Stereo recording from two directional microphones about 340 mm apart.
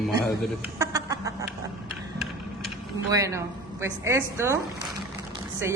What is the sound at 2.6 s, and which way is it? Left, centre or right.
Speech, centre.